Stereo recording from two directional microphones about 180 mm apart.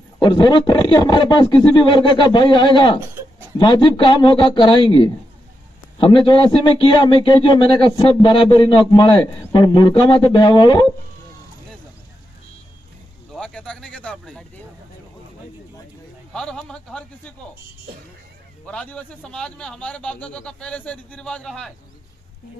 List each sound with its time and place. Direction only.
0.2 s a man's voice: 25° left (ahead or behind)
13.3 s speech: 5° left (ahead or behind)
16.3 s a man's voice: 5° left (ahead or behind)
18.7 s a man's voice: 5° left (ahead or behind)